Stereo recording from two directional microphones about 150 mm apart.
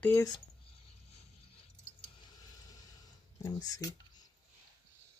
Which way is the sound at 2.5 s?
25° left (ahead or behind).